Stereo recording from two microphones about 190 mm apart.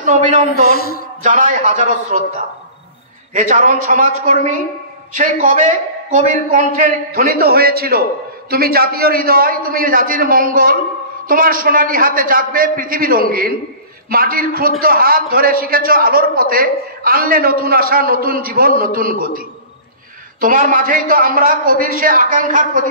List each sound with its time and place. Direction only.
0.0 s a man's voice: 40° right (ahead or behind)
0.7 s a sound: 55° left (ahead or behind)
1.2 s a man's voice: 40° right (ahead or behind)
3.3 s a man's voice: 45° right (ahead or behind)